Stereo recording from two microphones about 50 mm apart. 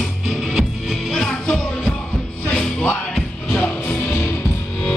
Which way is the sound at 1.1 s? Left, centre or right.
Centre.